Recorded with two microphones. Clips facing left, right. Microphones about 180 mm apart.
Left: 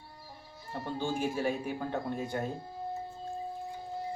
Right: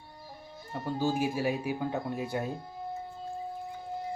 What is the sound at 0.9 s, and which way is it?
Speech, 10° right (ahead or behind).